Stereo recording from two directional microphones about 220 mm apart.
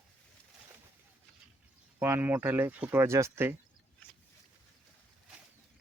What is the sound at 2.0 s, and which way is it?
Speech, 10° right (ahead or behind).